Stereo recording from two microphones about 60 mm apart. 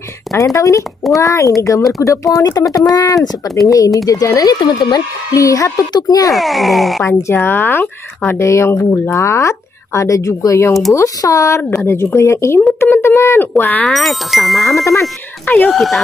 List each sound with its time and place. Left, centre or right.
0.3 s speech: left
3.6 s speech: left
6.3 s speech: centre
7.1 s speech: left
8.3 s speech: left
11.9 s speech: left
13.4 s speech: left
13.8 s speech: centre
15.4 s speech: left
15.7 s speech: centre